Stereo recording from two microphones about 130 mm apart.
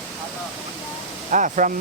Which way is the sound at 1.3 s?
80° right.